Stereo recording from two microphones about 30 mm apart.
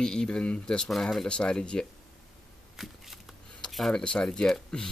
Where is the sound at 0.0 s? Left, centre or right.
Left.